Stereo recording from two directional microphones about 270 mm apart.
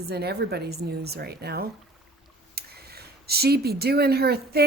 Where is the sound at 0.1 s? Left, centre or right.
Right.